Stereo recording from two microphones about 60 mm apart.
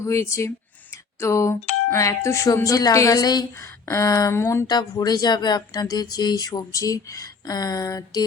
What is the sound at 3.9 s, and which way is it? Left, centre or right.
Speech, left.